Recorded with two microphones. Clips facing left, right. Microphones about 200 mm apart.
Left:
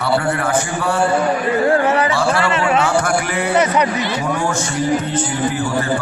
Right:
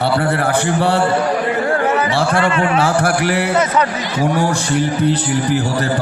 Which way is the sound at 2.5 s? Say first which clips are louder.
Right 1 dB; 35° right (ahead or behind).